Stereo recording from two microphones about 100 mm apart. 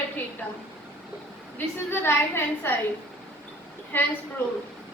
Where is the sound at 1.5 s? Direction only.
25° left (ahead or behind).